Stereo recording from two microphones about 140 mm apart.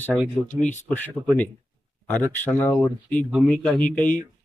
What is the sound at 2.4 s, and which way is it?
Speech, 15° left (ahead or behind).